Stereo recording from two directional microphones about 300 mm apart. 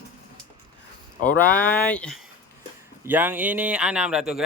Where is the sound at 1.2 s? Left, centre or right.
Centre.